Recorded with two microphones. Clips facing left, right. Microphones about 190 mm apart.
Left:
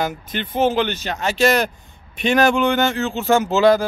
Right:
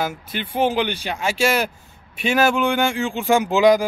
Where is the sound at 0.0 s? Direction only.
10° right (ahead or behind).